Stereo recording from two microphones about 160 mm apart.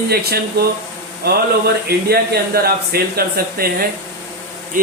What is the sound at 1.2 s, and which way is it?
Speech, 80° right.